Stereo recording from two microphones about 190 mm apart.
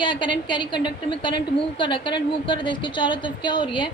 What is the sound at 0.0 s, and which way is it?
A woman's voice, 25° left (ahead or behind).